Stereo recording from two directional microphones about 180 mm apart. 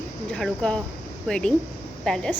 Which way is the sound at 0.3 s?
5° left (ahead or behind).